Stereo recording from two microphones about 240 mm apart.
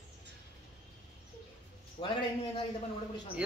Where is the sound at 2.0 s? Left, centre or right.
Left.